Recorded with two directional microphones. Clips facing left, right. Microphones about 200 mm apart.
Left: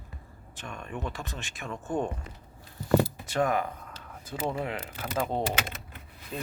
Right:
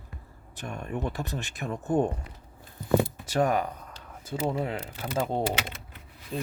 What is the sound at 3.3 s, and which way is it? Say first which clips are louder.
Speech: right 4 dB; 35° right (ahead or behind).